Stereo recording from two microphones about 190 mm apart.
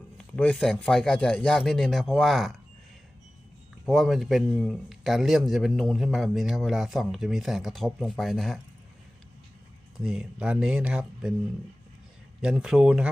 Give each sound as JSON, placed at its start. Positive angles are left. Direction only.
{"t": 0.2, "sound": "speech", "side_deg": 5}
{"t": 3.8, "sound": "speech", "side_deg": 0}
{"t": 10.0, "sound": "speech", "side_deg": -5}
{"t": 12.4, "sound": "speech", "side_deg": -5}